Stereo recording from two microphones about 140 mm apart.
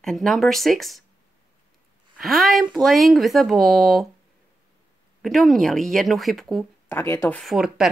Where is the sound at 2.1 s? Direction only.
Centre (ahead or behind).